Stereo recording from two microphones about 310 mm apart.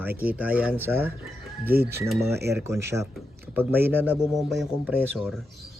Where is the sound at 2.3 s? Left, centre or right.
Right.